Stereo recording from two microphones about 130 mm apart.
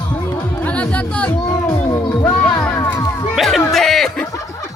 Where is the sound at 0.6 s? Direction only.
10° left (ahead or behind).